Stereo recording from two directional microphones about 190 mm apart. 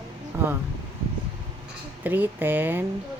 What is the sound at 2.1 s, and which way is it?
Speech, 10° right (ahead or behind).